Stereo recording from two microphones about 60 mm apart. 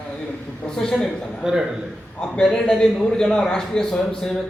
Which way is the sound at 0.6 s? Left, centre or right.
Centre.